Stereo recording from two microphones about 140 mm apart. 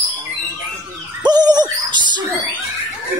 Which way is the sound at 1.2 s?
30° right (ahead or behind).